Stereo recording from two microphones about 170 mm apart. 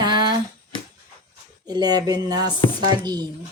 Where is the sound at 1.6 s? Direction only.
25° right (ahead or behind).